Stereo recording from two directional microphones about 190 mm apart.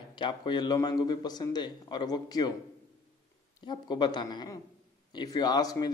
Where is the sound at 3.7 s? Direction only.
25° left (ahead or behind).